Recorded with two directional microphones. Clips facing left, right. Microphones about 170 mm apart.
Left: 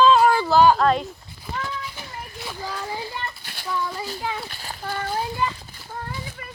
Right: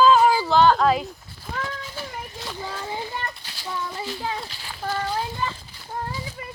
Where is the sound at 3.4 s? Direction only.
55° left (ahead or behind).